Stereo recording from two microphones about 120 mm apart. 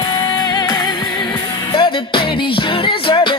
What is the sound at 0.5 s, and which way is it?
Music, 40° left (ahead or behind).